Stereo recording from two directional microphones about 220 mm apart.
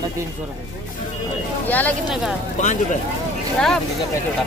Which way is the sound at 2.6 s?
35° left (ahead or behind).